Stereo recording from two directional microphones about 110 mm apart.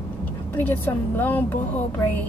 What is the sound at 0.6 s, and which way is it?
A woman's voice, 15° left (ahead or behind).